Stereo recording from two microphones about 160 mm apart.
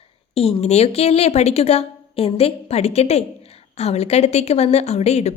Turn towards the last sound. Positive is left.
turn(degrees=45)  # may be behind; listen again after turning